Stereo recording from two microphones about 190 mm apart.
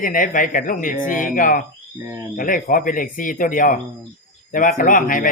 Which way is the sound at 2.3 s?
45° left (ahead or behind).